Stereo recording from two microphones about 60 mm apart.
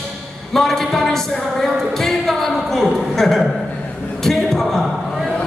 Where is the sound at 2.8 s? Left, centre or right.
Centre.